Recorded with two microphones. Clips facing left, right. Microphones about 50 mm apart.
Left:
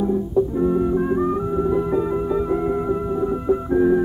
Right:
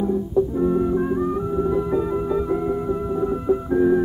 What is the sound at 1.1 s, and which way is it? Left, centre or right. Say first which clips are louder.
Music: left 2 dB; centre.